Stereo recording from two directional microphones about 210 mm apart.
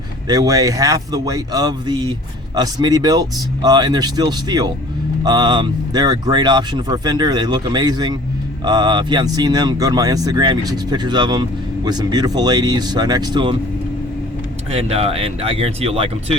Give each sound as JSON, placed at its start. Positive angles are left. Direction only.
{"t": 0.3, "sound": "speech", "side_deg": -15}
{"t": 14.7, "sound": "speech", "side_deg": -30}